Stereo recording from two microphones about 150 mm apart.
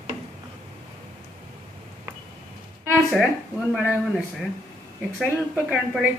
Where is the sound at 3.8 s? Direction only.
5° right (ahead or behind).